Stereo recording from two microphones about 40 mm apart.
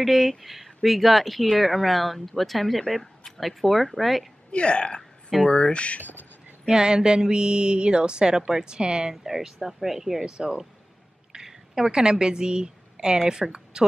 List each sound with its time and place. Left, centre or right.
0.0 s speech: centre
4.5 s speech: left
5.9 s speech: left
6.7 s speech: centre
9.1 s speech: centre
10.3 s a woman's voice: right